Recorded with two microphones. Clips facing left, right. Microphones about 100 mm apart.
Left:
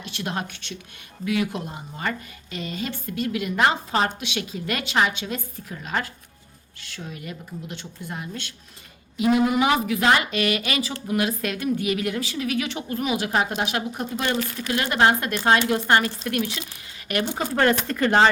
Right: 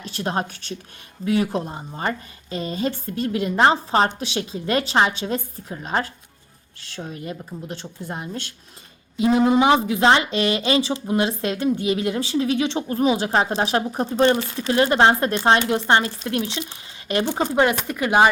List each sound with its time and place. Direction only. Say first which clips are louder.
0.0 s a woman's voice: right 4 dB; 40° right (ahead or behind); by 18.3 s 10° right (ahead or behind)